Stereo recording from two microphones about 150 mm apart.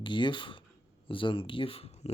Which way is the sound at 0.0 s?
30° left (ahead or behind).